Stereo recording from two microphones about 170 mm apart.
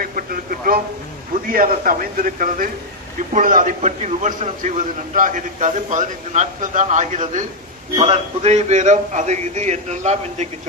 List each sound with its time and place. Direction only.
0.0 s a sound: 55° right (ahead or behind)
1.5 s a man's voice: 55° right (ahead or behind)
7.9 s a man's voice: 35° right (ahead or behind)